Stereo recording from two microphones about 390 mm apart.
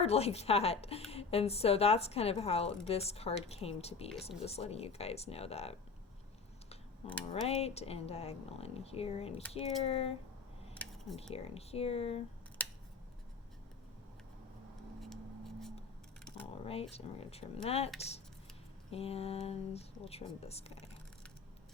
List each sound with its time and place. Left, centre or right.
0.0 s a woman's voice: centre
7.4 s a woman's voice: centre
10.8 s a sound: centre
11.2 s a woman's voice: centre
12.6 s scissors: centre
15.0 s a sound: centre
16.9 s a woman's voice: centre